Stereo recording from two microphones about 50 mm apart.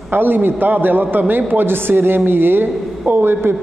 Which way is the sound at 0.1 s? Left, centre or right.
Right.